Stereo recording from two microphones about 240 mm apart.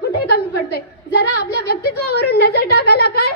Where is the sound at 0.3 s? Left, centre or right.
Left.